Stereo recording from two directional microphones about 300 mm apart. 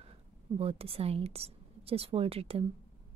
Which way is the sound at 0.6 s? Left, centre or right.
Centre.